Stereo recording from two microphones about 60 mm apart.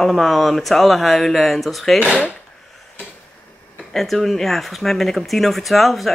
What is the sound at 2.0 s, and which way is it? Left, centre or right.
Speech, centre.